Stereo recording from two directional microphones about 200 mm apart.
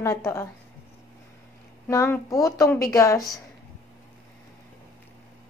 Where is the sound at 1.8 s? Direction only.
15° left (ahead or behind).